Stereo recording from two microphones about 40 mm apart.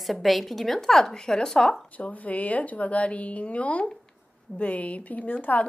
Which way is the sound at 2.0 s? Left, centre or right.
Left.